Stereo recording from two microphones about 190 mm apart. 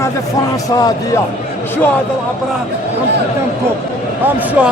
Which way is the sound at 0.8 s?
20° left (ahead or behind).